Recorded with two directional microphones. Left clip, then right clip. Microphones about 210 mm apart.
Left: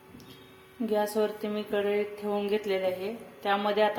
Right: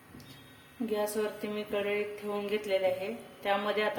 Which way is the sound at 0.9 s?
20° left (ahead or behind).